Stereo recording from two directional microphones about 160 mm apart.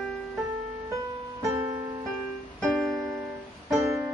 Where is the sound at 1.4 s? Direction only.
20° right (ahead or behind).